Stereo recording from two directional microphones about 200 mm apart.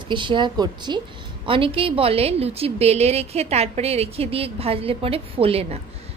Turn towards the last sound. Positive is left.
turn(degrees=-30)  # may be behind; listen again after turning